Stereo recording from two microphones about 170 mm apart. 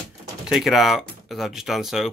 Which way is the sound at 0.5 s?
Centre (ahead or behind).